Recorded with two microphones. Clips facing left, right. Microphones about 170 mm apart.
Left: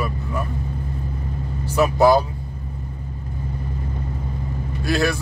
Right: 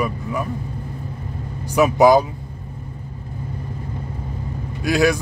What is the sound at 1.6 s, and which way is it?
Speech, 15° right (ahead or behind).